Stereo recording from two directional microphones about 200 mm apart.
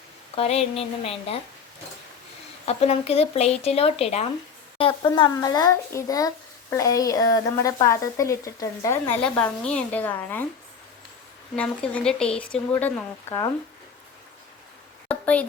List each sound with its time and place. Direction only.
0.3 s speech: 30° left (ahead or behind)
2.6 s speech: 30° left (ahead or behind); by 10.4 s 10° left (ahead or behind)
11.5 s speech: 5° left (ahead or behind)
15.0 s a sound: 5° left (ahead or behind)